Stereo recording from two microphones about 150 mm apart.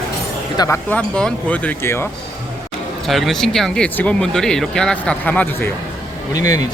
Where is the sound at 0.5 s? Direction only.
25° left (ahead or behind).